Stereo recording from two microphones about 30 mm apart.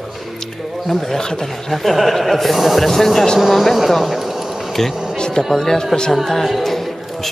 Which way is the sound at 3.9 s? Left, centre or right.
Centre.